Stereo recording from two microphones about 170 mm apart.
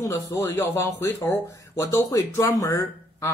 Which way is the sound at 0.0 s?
15° left (ahead or behind).